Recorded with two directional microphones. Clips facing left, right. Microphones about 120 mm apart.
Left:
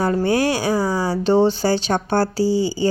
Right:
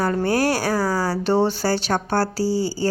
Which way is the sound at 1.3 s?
10° right (ahead or behind).